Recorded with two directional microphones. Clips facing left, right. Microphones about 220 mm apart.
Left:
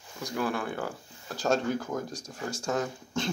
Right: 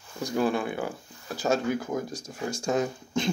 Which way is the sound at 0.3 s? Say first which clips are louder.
Right 5 dB; 25° right (ahead or behind).